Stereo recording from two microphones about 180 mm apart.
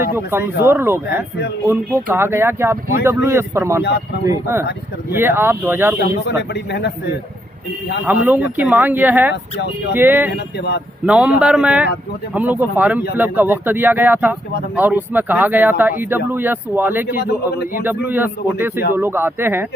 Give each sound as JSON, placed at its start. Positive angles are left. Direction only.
{"t": 0.2, "sound": "speech", "side_deg": -15}
{"t": 6.0, "sound": "speech", "side_deg": 70}
{"t": 8.0, "sound": "speech", "side_deg": -10}
{"t": 17.2, "sound": "speech", "side_deg": 60}
{"t": 17.8, "sound": "speech", "side_deg": -10}